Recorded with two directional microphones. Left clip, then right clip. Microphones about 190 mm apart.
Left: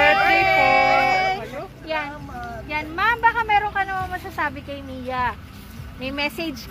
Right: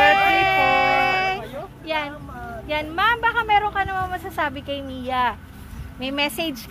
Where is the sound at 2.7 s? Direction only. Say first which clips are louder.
Right 1 dB; 65° right (ahead or behind).